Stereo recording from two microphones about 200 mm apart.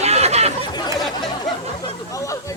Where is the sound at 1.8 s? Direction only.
15° left (ahead or behind).